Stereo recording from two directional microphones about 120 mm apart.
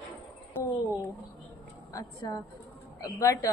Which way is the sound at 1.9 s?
30° left (ahead or behind).